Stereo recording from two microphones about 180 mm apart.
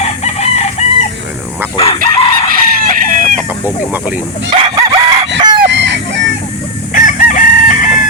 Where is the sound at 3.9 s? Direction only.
10° right (ahead or behind).